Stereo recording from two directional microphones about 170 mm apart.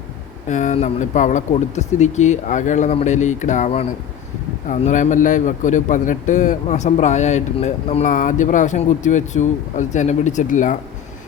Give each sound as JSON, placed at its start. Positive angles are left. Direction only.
{"t": 0.4, "sound": "speech", "side_deg": 45}